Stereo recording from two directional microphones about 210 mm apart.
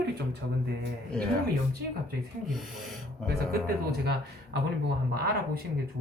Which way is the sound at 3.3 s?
50° right (ahead or behind).